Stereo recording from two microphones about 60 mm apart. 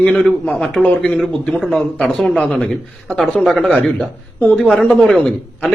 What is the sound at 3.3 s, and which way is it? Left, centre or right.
Speech, centre.